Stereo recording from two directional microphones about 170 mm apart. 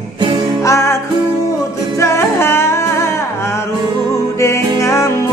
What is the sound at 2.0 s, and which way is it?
Music, 15° left (ahead or behind).